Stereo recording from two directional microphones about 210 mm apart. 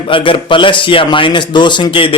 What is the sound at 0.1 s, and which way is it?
A man's voice, 25° left (ahead or behind).